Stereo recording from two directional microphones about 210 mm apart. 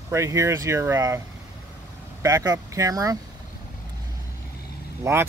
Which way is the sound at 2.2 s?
15° right (ahead or behind).